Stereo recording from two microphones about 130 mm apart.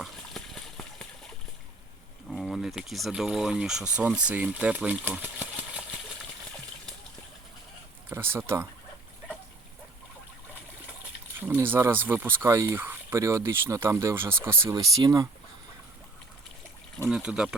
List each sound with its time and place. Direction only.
0.0 s a sound: centre (ahead or behind)
2.3 s speech: centre (ahead or behind)
8.1 s speech: 15° right (ahead or behind)
11.3 s speech: 15° right (ahead or behind)
17.1 s speech: 5° right (ahead or behind)